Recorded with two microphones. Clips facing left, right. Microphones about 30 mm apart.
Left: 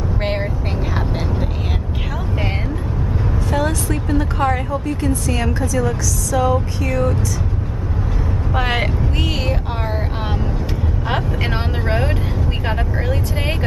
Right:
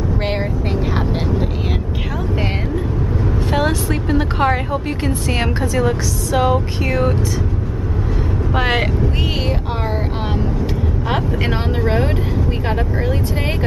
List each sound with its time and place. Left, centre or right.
0.2 s vehicle: centre
3.5 s a sound: right
4.8 s speech: right
8.5 s speech: centre
11.1 s speech: centre